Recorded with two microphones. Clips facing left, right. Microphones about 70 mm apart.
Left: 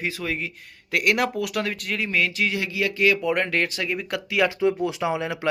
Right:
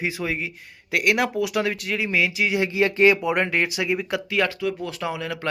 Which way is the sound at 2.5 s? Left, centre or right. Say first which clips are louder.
Right 5 dB; right.